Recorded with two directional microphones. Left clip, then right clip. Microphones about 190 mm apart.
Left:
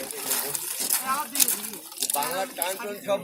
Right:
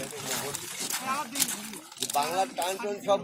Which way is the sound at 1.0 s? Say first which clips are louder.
Left 4 dB; 50° right (ahead or behind).